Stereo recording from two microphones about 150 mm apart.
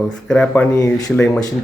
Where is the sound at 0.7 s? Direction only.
20° left (ahead or behind).